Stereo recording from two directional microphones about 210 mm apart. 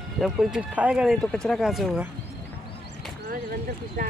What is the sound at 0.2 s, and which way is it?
Speech, centre (ahead or behind).